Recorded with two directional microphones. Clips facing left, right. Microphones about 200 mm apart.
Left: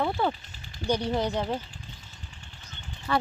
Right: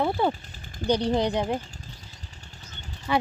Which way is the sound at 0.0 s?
10° right (ahead or behind).